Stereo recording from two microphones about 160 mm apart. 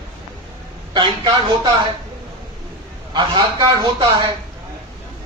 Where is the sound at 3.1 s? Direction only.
30° right (ahead or behind).